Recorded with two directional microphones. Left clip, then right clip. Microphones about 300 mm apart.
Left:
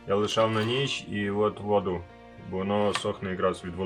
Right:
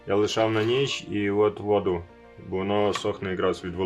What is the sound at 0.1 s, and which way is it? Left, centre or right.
Speech, right.